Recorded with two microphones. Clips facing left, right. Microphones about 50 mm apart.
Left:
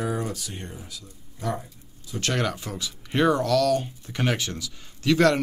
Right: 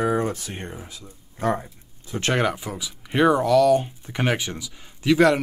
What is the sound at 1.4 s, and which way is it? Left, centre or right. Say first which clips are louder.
Speech: right 6 dB; right.